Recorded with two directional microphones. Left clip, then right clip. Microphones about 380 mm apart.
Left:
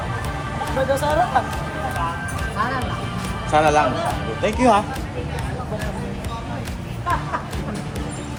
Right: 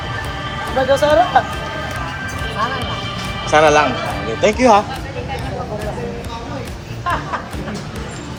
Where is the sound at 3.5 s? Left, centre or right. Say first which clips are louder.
Right 5 dB; centre.